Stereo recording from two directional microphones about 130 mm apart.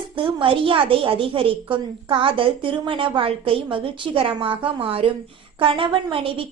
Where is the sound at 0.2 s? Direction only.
45° right (ahead or behind).